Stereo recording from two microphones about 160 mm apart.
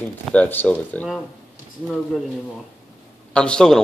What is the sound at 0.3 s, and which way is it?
Speech, 10° left (ahead or behind).